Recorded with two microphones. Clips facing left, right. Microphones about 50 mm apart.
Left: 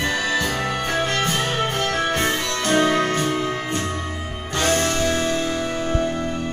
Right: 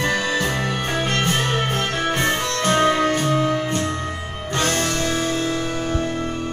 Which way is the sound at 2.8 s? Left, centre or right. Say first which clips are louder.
Right 1 dB; centre.